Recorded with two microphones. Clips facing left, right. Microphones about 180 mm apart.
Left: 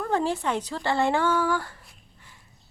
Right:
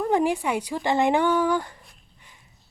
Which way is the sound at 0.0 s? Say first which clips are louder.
Right 3 dB; 15° right (ahead or behind).